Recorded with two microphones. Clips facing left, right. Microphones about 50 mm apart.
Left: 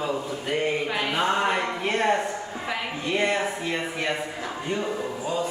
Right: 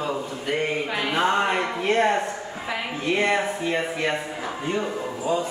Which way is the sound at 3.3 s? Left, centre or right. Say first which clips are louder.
Right 3 dB; centre.